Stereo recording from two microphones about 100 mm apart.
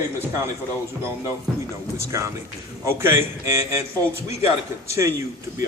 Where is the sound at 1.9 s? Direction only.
30° right (ahead or behind).